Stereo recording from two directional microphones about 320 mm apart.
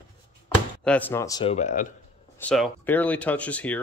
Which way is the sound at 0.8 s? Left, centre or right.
Centre.